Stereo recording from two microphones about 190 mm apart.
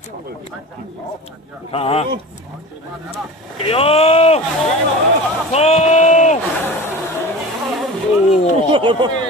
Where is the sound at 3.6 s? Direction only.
30° left (ahead or behind).